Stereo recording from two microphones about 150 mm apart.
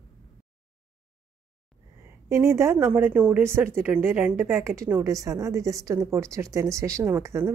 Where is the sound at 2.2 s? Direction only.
20° right (ahead or behind).